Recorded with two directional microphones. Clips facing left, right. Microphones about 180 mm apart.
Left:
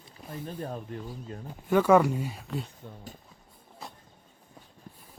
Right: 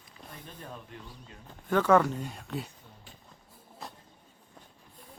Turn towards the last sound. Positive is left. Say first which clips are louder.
# even
turn(degrees=0)  # may be behind; listen again after turning